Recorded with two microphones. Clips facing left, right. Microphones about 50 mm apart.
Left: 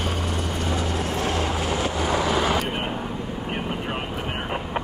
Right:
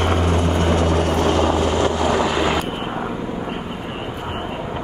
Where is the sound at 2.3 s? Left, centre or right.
Right.